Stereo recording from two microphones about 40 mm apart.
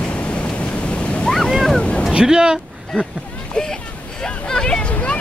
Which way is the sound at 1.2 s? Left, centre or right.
Centre.